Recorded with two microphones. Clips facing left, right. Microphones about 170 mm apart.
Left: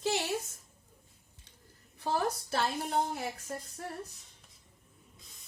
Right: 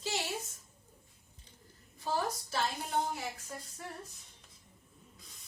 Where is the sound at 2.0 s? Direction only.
60° left (ahead or behind).